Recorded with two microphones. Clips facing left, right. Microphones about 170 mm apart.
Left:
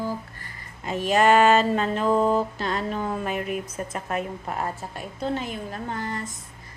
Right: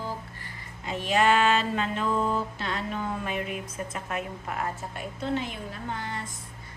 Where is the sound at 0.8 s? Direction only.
45° left (ahead or behind).